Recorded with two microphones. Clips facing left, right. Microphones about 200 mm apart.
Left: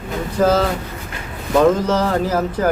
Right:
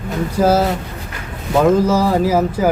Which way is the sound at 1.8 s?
10° right (ahead or behind).